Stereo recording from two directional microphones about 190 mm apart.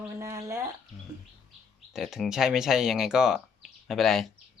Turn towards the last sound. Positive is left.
turn(degrees=0)  # may be behind; listen again after turning